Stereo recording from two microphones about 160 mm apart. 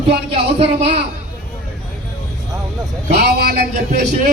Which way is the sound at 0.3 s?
35° right (ahead or behind).